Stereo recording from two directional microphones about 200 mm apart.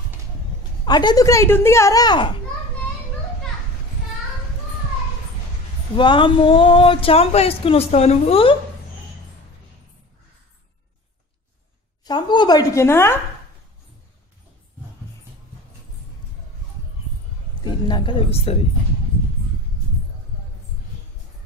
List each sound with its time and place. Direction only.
0.8 s speech: 20° left (ahead or behind)
5.9 s speech: 25° left (ahead or behind)
12.0 s speech: 20° left (ahead or behind)
17.6 s speech: 20° left (ahead or behind)